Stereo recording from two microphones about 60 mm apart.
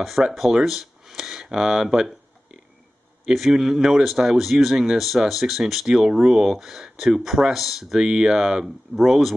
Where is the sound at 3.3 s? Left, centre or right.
Centre.